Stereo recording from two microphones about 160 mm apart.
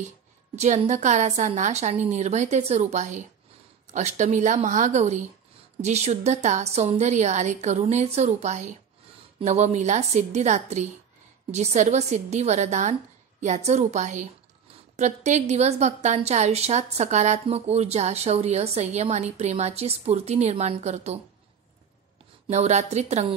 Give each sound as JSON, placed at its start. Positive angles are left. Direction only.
{"t": 0.6, "sound": "a woman's voice", "side_deg": -45}
{"t": 22.5, "sound": "a woman's voice", "side_deg": -45}